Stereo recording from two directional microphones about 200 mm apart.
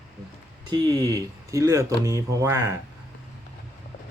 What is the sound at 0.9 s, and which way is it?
Speech, 20° right (ahead or behind).